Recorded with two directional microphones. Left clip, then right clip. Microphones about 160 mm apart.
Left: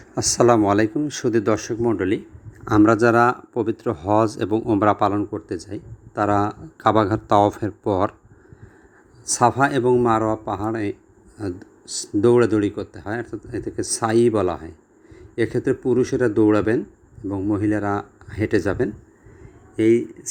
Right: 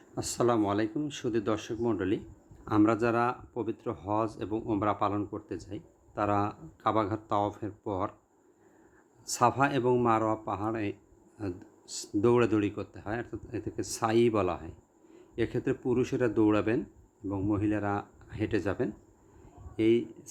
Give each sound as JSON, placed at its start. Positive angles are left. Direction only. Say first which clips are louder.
{"t": 0.1, "sound": "speech", "louder": "left 12 dB", "side_deg": 35}
{"t": 2.6, "sound": "speech", "louder": "left 11 dB", "side_deg": 30}
{"t": 9.2, "sound": "speech", "louder": "left 8 dB", "side_deg": 20}